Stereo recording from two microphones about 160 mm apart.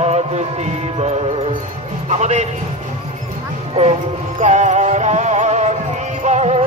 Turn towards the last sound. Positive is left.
turn(degrees=-45)  # may be behind; listen again after turning